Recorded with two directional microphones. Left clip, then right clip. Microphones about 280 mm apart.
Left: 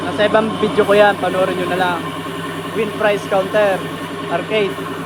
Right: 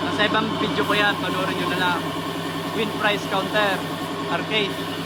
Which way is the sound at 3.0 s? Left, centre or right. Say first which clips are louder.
Left 7 dB; centre.